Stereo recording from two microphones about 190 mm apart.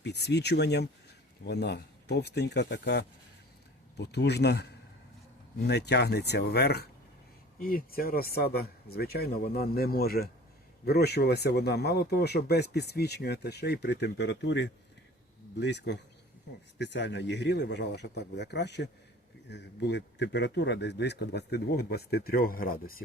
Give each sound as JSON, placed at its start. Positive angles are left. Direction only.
{"t": 0.0, "sound": "speech", "side_deg": 60}